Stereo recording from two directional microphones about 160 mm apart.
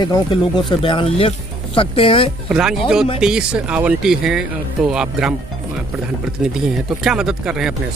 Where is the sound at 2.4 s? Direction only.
5° right (ahead or behind).